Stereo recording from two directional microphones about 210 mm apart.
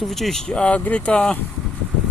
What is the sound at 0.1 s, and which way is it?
Speech, centre (ahead or behind).